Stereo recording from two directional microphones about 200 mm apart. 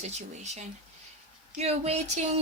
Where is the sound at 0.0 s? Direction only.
35° right (ahead or behind).